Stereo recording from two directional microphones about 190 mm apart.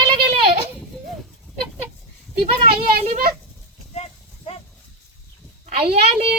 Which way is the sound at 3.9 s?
30° left (ahead or behind).